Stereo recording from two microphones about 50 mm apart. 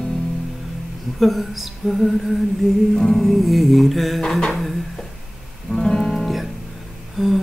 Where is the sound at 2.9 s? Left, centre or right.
Centre.